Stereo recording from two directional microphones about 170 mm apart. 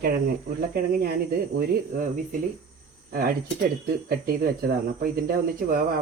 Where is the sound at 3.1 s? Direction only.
60° right (ahead or behind).